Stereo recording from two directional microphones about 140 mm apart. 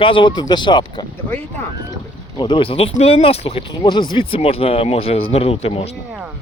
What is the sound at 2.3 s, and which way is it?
Speech, 35° left (ahead or behind).